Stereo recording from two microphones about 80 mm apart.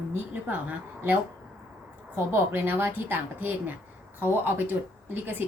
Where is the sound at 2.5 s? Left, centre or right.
Right.